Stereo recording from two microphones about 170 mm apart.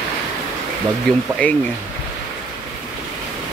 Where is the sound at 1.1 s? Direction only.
5° left (ahead or behind).